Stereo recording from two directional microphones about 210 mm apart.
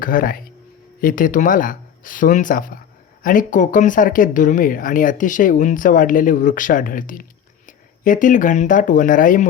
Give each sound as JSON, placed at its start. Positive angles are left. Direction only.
{"t": 0.0, "sound": "speech", "side_deg": 40}